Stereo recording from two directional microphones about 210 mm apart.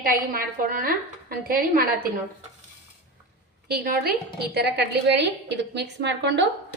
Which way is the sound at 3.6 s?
45° right (ahead or behind).